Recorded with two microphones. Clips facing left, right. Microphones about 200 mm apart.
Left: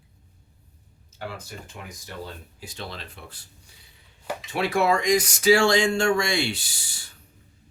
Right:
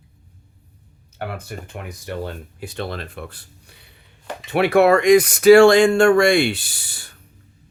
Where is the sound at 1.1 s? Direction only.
60° right (ahead or behind).